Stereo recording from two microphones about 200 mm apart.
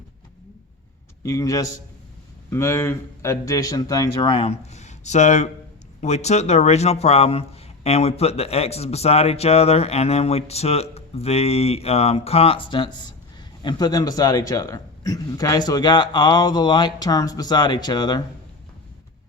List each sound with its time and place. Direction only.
1.2 s a man's voice: 15° left (ahead or behind)